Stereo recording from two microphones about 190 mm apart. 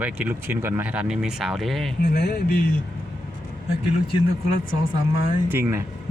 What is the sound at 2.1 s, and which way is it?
Speech, 55° left (ahead or behind).